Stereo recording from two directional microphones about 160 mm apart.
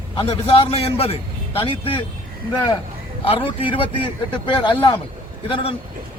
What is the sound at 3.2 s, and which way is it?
A man's voice, 35° left (ahead or behind).